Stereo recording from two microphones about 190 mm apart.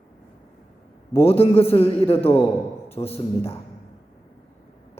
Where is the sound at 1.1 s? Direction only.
30° left (ahead or behind).